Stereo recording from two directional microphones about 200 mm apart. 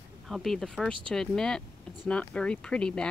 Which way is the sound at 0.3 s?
Centre (ahead or behind).